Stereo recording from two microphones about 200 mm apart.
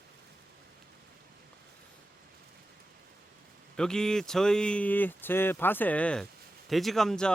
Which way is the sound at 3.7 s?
5° left (ahead or behind).